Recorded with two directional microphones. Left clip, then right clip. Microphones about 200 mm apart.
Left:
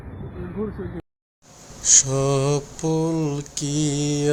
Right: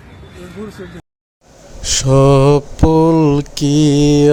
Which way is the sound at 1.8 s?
35° right (ahead or behind).